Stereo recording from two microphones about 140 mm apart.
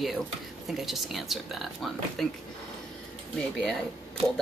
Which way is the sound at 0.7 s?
Centre (ahead or behind).